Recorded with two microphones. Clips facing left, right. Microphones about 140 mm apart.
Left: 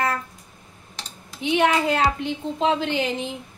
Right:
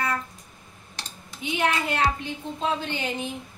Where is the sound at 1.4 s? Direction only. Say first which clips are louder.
Left 6 dB; 85° left.